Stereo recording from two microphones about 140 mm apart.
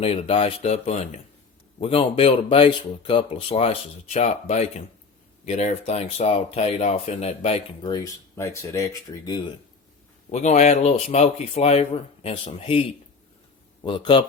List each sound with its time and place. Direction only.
0.0 s speech: 45° left (ahead or behind)
8.4 s speech: 20° left (ahead or behind)
9.0 s speech: 30° left (ahead or behind)
10.3 s speech: 55° left (ahead or behind)
13.8 s speech: 35° left (ahead or behind)